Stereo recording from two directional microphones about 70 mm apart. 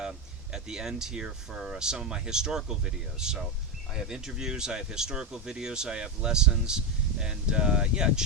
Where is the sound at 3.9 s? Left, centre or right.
Centre.